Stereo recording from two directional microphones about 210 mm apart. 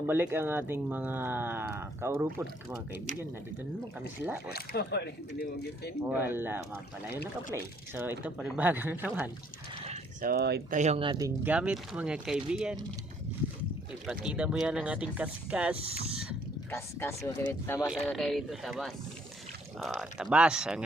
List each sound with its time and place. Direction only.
0.1 s speech: 10° right (ahead or behind)
4.5 s speech: 50° left (ahead or behind)
6.1 s speech: 10° right (ahead or behind)
9.8 s a sound: 30° right (ahead or behind)
10.2 s speech: 50° right (ahead or behind)
10.8 s speech: 30° right (ahead or behind)
11.4 s speech: 5° right (ahead or behind)
14.1 s speech: 5° right (ahead or behind)
16.7 s speech: 10° left (ahead or behind)
17.7 s speech: 5° right (ahead or behind)